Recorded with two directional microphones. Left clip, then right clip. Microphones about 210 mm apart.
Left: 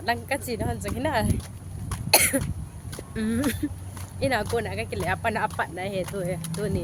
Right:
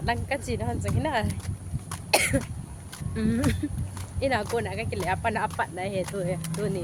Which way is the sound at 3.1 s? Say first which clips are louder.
Even; 15° left (ahead or behind).